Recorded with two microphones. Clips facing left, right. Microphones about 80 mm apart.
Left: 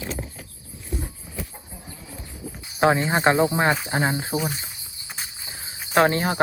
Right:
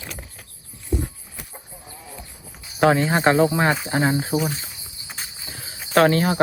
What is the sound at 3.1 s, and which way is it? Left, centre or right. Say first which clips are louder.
Speech: right 2 dB; centre.